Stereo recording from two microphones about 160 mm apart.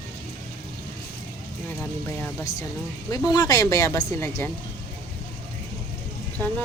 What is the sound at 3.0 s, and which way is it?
Speech, 25° left (ahead or behind).